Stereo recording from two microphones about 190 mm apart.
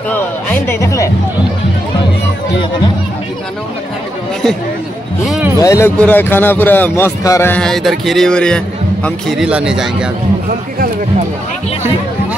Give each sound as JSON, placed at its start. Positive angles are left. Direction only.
{"t": 0.1, "sound": "a man's voice", "side_deg": 10}
{"t": 5.2, "sound": "a sound", "side_deg": 0}
{"t": 5.6, "sound": "a man's voice", "side_deg": 15}